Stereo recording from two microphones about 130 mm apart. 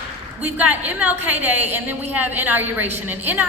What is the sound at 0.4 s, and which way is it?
A woman's voice, 10° right (ahead or behind).